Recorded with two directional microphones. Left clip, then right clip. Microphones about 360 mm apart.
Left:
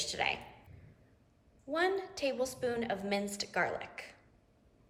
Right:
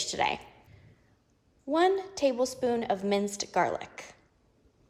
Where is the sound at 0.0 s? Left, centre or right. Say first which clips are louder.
Right 5 dB; centre.